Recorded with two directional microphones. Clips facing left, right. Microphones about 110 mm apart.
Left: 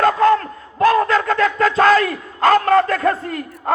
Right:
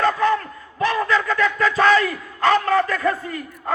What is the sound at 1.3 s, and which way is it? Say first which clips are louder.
Music: left 3 dB; 60° left (ahead or behind).